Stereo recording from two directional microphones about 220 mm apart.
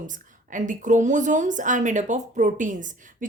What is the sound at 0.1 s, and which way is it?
A woman's voice, 35° right (ahead or behind).